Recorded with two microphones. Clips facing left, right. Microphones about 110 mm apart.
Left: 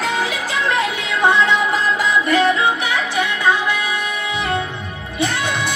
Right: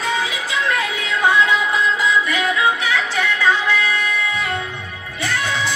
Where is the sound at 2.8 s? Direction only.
15° left (ahead or behind).